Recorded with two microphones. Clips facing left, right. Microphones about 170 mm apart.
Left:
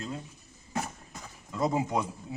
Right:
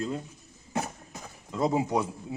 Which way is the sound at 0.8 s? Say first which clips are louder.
Right 2 dB; 20° right (ahead or behind).